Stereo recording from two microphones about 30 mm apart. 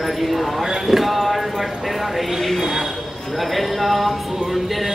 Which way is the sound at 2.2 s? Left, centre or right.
Centre.